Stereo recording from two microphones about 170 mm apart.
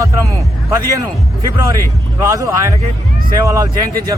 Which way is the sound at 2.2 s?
15° right (ahead or behind).